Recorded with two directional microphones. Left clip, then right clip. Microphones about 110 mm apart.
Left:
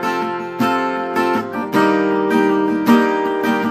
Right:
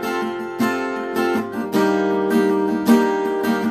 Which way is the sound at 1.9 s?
25° right (ahead or behind).